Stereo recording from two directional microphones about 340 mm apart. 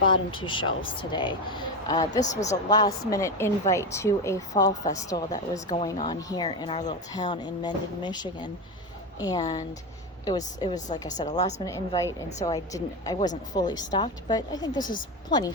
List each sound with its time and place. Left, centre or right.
0.1 s a woman's voice: centre
14.8 s speech: left
15.3 s a woman's voice: centre